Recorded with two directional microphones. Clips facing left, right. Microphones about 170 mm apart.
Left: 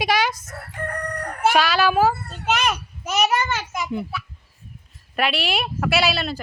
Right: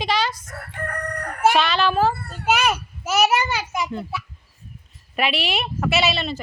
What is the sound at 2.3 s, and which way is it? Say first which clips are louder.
Children playing: right 2 dB; 10° right (ahead or behind).